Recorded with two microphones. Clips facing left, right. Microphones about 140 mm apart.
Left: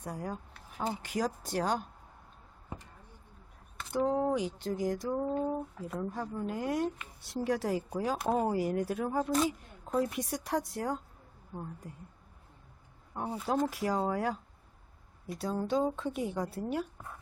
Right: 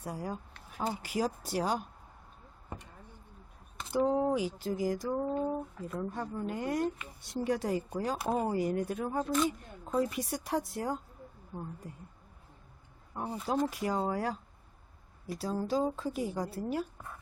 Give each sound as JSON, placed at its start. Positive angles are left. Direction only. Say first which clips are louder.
{"t": 0.0, "sound": "a woman's voice", "louder": "even", "side_deg": -5}
{"t": 3.8, "sound": "a woman's voice", "louder": "right 1 dB", "side_deg": -5}
{"t": 13.1, "sound": "a woman's voice", "louder": "left 1 dB", "side_deg": 5}